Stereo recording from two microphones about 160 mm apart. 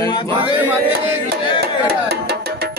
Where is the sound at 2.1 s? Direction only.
80° right.